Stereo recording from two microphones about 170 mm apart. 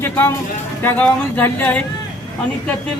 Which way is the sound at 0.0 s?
15° left (ahead or behind).